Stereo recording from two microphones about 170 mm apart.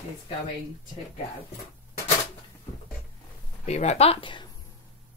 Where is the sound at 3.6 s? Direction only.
40° left (ahead or behind).